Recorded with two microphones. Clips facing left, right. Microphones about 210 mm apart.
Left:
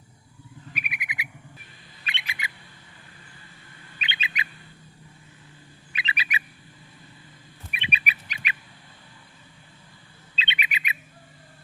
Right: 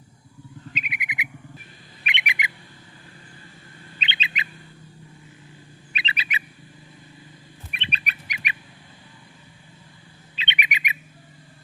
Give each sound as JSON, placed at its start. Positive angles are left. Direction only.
{"t": 0.7, "sound": "a sound", "side_deg": -20}
{"t": 2.0, "sound": "squawk", "side_deg": -15}
{"t": 3.9, "sound": "bird", "side_deg": -25}
{"t": 5.9, "sound": "bird", "side_deg": -25}
{"t": 7.7, "sound": "bird", "side_deg": 10}
{"t": 10.3, "sound": "bird", "side_deg": -15}